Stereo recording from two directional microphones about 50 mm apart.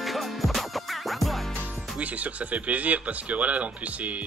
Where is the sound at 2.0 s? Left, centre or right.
Right.